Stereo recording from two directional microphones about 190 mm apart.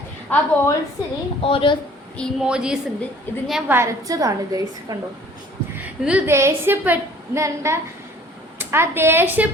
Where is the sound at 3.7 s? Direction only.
15° right (ahead or behind).